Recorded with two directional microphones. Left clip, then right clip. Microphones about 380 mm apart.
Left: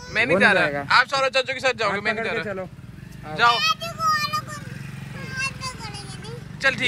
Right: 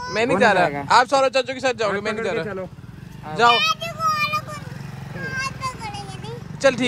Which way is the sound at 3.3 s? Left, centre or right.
Centre.